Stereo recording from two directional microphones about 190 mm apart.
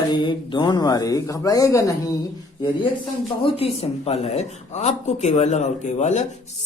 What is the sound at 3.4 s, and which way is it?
Speech, 30° left (ahead or behind).